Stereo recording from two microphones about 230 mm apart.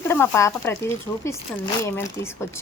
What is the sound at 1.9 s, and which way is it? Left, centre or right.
Speech, centre.